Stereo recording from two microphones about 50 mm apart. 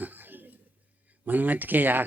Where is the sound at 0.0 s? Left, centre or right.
Right.